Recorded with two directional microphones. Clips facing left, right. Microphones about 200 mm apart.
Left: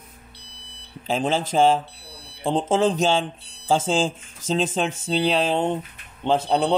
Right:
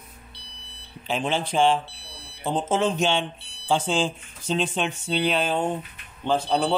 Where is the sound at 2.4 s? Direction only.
30° left (ahead or behind).